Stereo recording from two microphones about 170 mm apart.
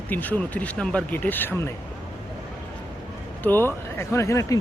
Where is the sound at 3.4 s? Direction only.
10° left (ahead or behind).